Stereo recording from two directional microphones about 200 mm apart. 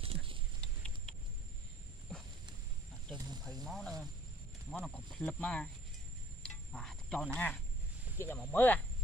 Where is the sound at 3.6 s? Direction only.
Centre (ahead or behind).